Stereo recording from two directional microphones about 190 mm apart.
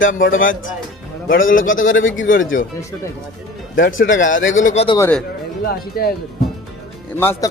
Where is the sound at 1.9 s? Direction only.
90° left.